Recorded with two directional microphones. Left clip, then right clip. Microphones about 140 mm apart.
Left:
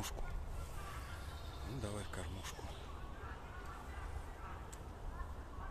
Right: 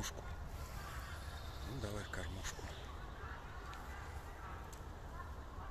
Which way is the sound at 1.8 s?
10° left (ahead or behind).